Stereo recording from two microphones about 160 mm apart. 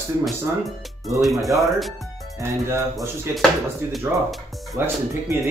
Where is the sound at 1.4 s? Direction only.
20° right (ahead or behind).